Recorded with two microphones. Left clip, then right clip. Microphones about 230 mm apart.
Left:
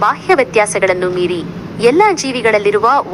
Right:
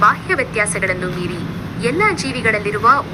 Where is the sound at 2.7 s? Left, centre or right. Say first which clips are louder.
Left 2 dB; left.